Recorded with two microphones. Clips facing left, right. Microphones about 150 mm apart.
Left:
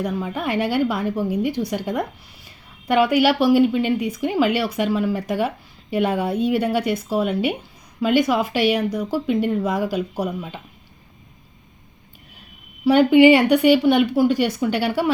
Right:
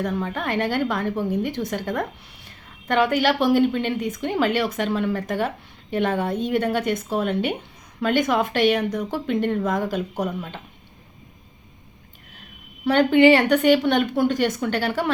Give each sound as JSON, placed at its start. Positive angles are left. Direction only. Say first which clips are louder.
{"t": 0.0, "sound": "a woman's voice", "louder": "left 1 dB", "side_deg": 5}
{"t": 12.8, "sound": "a woman's voice", "louder": "left 3 dB", "side_deg": 10}